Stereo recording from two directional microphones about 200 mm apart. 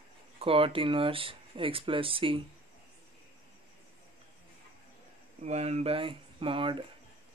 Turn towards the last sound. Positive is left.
turn(degrees=-25)  # may be behind; listen again after turning